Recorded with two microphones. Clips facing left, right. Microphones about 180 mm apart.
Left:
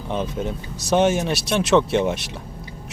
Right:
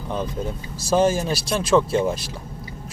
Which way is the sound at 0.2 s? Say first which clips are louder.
Left 1 dB; 20° left (ahead or behind).